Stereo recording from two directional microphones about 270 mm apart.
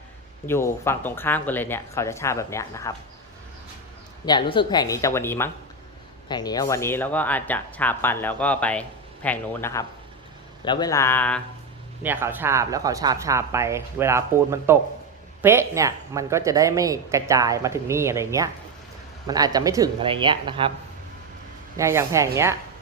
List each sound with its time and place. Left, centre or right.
0.4 s speech: centre
4.3 s speech: centre
12.0 s speech: centre
21.8 s speech: centre